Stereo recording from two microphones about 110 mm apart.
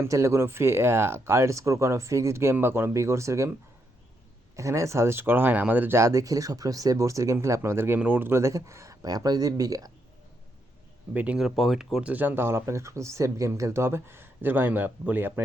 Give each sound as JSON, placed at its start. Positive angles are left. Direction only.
{"t": 0.0, "sound": "speech", "side_deg": -25}
{"t": 4.5, "sound": "speech", "side_deg": -30}
{"t": 11.1, "sound": "speech", "side_deg": -15}
{"t": 11.3, "sound": "speech", "side_deg": 0}